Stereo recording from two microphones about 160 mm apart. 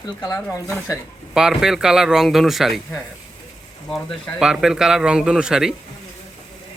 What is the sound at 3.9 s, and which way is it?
A man's voice, 5° right (ahead or behind).